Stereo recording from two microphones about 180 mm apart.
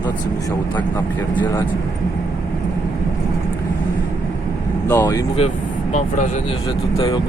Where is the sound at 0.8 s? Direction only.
10° left (ahead or behind).